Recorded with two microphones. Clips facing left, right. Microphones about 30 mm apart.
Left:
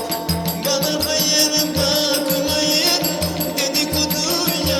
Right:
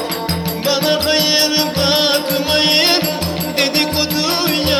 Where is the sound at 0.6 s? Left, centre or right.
Right.